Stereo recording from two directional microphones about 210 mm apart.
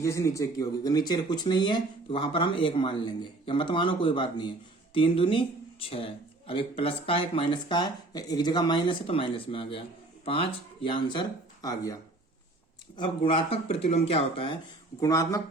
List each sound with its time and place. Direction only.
0.0 s speech: 15° left (ahead or behind)
6.5 s speech: 25° left (ahead or behind)
13.0 s speech: 25° left (ahead or behind)